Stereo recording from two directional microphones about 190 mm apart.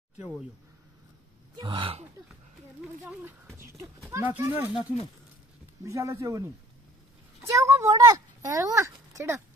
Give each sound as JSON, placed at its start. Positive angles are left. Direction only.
{"t": 1.6, "sound": "speech", "side_deg": -25}
{"t": 4.1, "sound": "speech", "side_deg": -15}
{"t": 5.9, "sound": "speech", "side_deg": -15}